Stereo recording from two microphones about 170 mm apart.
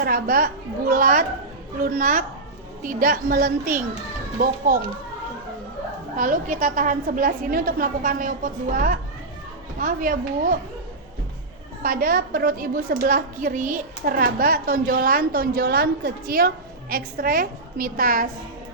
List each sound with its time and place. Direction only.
0.0 s a woman's voice: 60° right (ahead or behind)
6.1 s a woman's voice: 50° right (ahead or behind)
11.8 s a woman's voice: 55° right (ahead or behind)